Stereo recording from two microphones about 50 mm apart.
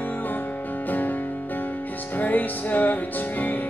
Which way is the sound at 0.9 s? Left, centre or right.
Left.